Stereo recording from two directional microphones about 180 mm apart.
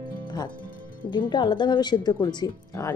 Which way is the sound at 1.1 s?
25° left (ahead or behind).